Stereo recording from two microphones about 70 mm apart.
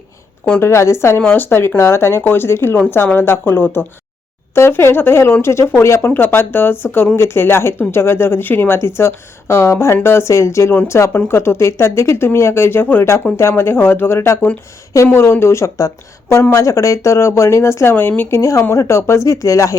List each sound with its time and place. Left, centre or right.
0.6 s speech: left
6.1 s speech: left